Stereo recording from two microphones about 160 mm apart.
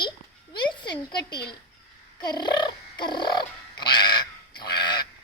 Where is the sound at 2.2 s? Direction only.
25° left (ahead or behind).